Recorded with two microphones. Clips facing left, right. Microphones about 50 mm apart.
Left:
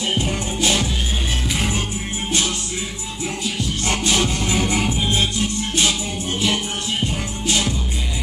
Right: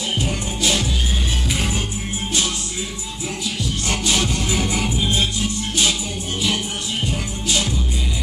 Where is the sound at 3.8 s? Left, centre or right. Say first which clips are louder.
Left 2 dB; left.